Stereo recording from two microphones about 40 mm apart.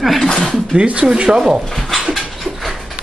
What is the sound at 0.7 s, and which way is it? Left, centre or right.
Speech, right.